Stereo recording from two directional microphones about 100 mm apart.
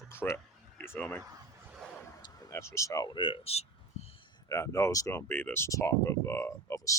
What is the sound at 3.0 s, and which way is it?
Speech, 55° left (ahead or behind).